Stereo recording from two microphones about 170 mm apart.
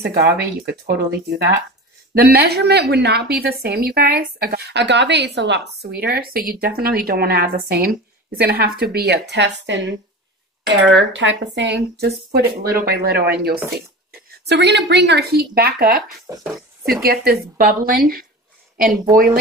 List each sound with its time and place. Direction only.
0.0 s a woman's voice: 70° right (ahead or behind)
12.7 s a woman's voice: 65° right (ahead or behind)
14.4 s a woman's voice: 85° right; by 16.0 s 60° right (ahead or behind)
16.3 s speech: 15° right (ahead or behind)
17.0 s speech: 65° right (ahead or behind)